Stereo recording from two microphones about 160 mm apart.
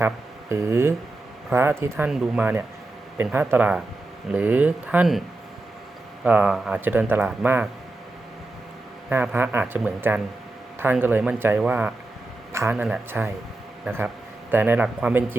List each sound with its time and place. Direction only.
0.0 s speech: 15° right (ahead or behind)
2.0 s speech: 5° right (ahead or behind)
6.2 s speech: 5° right (ahead or behind)
9.0 s speech: 10° right (ahead or behind)